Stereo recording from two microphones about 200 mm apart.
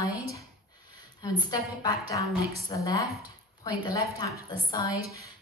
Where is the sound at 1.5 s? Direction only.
20° left (ahead or behind).